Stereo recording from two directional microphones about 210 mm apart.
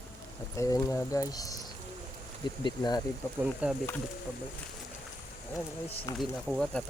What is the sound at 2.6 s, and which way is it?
Speech, 20° left (ahead or behind).